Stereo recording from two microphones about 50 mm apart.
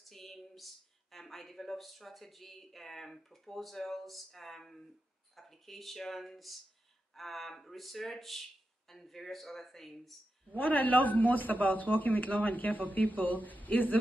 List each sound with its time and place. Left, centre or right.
0.1 s a sound: centre
1.1 s speech: centre
10.5 s speech: left